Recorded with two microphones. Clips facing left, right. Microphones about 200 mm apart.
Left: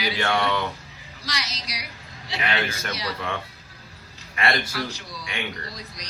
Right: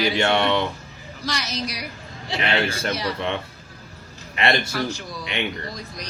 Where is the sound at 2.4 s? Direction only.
30° right (ahead or behind).